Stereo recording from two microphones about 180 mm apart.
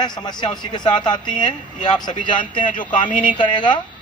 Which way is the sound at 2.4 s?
45° left (ahead or behind).